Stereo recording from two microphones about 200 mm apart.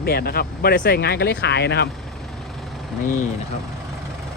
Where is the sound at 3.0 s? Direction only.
40° left (ahead or behind).